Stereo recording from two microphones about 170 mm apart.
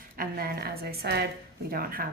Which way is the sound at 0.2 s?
60° right (ahead or behind).